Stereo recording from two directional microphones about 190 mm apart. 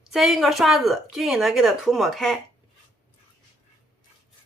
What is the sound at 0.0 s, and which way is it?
Speech, centre (ahead or behind).